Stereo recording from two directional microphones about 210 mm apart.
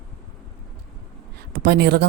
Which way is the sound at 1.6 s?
50° right (ahead or behind).